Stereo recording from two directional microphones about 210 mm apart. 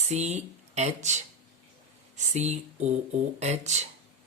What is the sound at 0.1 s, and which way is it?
Speech, 35° right (ahead or behind).